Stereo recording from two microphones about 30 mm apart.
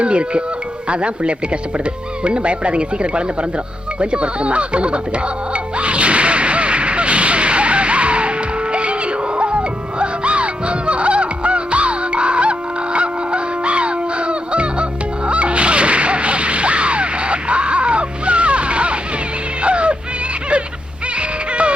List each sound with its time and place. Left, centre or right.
0.0 s speech: right
5.8 s whip: right
8.7 s music: right
15.3 s whip: right
19.6 s music: right